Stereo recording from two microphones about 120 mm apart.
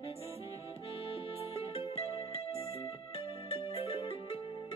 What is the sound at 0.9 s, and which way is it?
Music, 50° left (ahead or behind).